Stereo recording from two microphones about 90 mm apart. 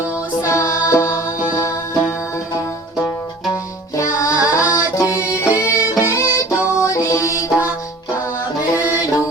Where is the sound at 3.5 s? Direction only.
35° left (ahead or behind).